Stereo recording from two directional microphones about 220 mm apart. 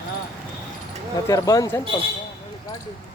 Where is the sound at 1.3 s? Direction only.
15° left (ahead or behind).